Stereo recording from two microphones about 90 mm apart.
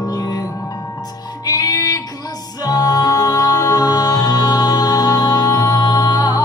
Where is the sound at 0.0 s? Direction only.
45° left (ahead or behind).